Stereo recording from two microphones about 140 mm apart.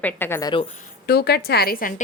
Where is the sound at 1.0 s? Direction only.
90° left.